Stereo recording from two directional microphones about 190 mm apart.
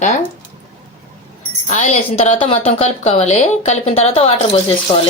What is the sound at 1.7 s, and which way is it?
A woman's voice, 40° left (ahead or behind).